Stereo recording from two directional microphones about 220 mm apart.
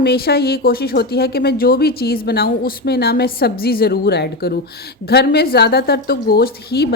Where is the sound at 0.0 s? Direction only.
45° left (ahead or behind).